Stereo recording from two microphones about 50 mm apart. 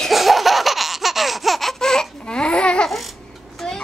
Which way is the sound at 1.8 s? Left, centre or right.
Centre.